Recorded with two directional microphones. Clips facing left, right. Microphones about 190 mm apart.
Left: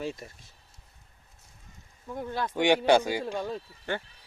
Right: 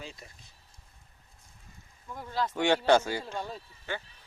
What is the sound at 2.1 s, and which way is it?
Speech, 55° left (ahead or behind).